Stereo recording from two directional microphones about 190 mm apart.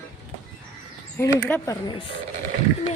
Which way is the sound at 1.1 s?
15° left (ahead or behind).